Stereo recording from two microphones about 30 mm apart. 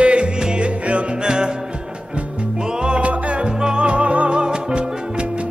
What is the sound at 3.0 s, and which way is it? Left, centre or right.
Music, right.